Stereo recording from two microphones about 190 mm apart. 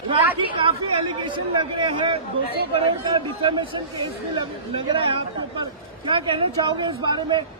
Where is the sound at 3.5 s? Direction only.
25° right (ahead or behind).